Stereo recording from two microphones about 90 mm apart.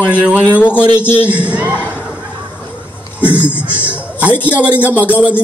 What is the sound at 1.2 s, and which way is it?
Speech, 15° right (ahead or behind).